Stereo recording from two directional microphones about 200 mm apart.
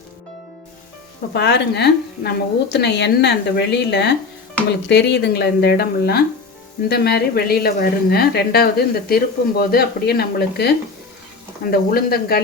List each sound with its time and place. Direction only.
1.3 s a woman's voice: 60° left (ahead or behind)